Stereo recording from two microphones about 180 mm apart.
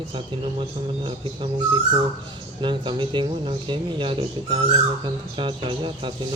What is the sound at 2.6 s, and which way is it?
Speech, 25° right (ahead or behind).